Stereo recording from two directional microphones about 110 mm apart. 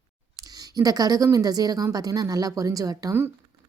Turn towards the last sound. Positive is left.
turn(degrees=-30)  # may be behind; listen again after turning